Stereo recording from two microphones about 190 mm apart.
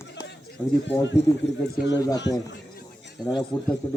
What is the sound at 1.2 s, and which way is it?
Speech, 65° left (ahead or behind).